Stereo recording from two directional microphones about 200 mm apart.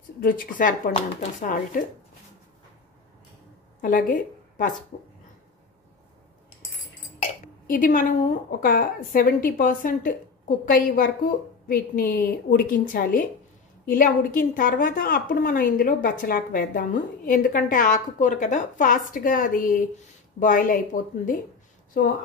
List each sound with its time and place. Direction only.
0.2 s speech: 40° left (ahead or behind)
3.8 s speech: 40° left (ahead or behind)
7.2 s a woman's voice: 45° left (ahead or behind)